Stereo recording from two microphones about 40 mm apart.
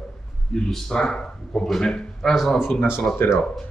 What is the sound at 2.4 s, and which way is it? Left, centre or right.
Speech, centre.